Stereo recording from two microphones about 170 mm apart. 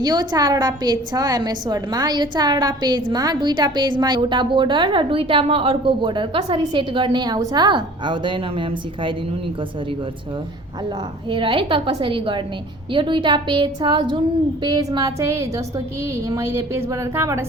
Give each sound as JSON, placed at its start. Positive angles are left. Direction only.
{"t": 0.0, "sound": "a woman's voice", "side_deg": -25}
{"t": 11.3, "sound": "a woman's voice", "side_deg": -30}